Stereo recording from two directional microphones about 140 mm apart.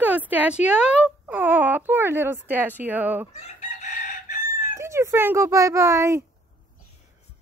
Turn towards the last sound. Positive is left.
turn(degrees=-20)  # may be behind; listen again after turning